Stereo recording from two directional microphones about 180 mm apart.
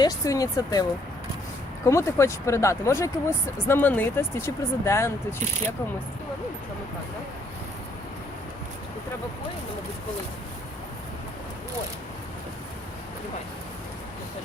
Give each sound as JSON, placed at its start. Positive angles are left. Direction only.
{"t": 0.0, "sound": "speech", "side_deg": 20}